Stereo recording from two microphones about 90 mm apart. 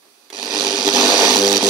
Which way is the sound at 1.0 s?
Centre (ahead or behind).